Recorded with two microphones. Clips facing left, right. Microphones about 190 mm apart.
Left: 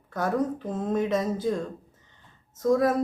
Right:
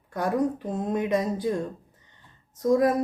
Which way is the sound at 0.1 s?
15° right (ahead or behind).